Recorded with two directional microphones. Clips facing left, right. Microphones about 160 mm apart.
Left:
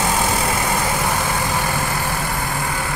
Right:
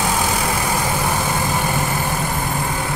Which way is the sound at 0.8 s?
15° right (ahead or behind).